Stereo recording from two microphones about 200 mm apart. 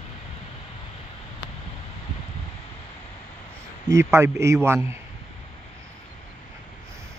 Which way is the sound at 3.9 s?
15° right (ahead or behind).